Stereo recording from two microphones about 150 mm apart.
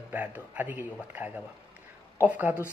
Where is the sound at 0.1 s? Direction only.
10° right (ahead or behind).